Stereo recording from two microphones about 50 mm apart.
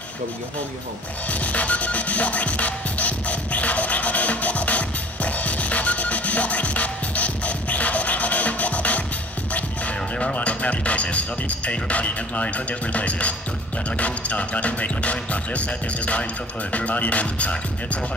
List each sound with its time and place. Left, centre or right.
1.3 s music: left
13.8 s speech: left